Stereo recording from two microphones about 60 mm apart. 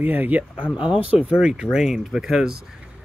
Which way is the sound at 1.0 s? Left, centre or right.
Centre.